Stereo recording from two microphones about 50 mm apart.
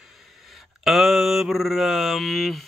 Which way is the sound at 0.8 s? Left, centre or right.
Centre.